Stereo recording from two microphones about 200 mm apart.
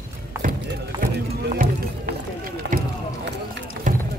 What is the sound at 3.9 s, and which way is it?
Run, 40° right (ahead or behind).